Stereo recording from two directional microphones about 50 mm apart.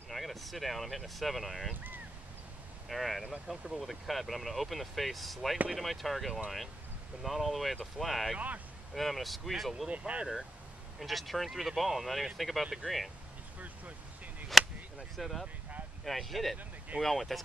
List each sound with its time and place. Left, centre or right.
0.1 s speech: centre
2.9 s speech: centre
9.8 s speech: right
11.0 s speech: centre
13.6 s vehicle: right
14.5 s a sound: centre
15.1 s speech: centre